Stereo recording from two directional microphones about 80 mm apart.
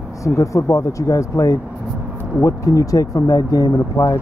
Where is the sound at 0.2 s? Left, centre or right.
Left.